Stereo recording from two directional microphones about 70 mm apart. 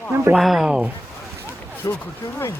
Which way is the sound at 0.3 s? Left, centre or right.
Centre.